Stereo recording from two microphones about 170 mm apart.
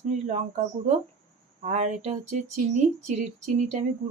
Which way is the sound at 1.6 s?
45° right (ahead or behind).